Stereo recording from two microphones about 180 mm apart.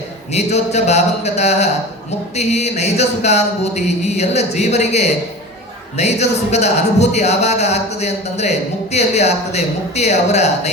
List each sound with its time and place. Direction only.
0.3 s speech: 40° left (ahead or behind)